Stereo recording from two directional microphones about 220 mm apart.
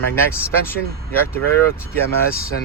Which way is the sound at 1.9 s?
40° left (ahead or behind).